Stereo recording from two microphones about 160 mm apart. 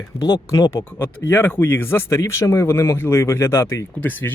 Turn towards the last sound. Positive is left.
turn(degrees=10)  # may be behind; listen again after turning